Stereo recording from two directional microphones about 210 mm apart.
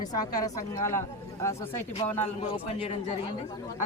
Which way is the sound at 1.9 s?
30° left (ahead or behind).